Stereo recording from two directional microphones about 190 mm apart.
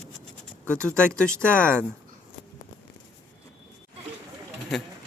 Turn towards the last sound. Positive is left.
turn(degrees=5)  # may be behind; listen again after turning